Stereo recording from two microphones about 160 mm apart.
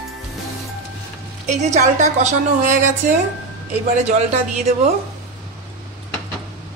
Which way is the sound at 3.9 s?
50° right (ahead or behind).